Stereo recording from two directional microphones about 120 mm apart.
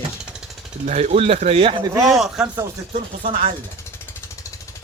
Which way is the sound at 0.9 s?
75° right (ahead or behind).